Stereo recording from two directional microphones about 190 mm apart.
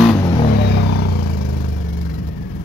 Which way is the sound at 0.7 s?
65° left (ahead or behind).